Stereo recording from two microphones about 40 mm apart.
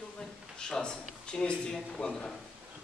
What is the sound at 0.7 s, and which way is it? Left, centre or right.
Speech, centre.